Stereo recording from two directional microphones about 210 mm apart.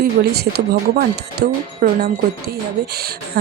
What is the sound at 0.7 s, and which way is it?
Speech, 50° right (ahead or behind).